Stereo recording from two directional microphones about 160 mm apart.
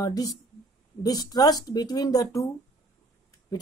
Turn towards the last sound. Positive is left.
turn(degrees=25)  # may be behind; listen again after turning